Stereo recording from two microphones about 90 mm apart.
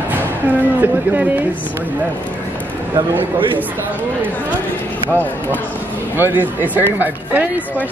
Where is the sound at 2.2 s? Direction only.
15° left (ahead or behind).